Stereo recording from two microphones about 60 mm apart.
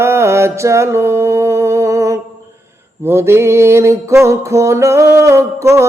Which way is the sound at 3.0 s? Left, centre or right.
Right.